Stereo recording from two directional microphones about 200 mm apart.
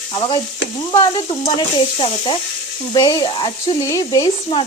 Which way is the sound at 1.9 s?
25° left (ahead or behind).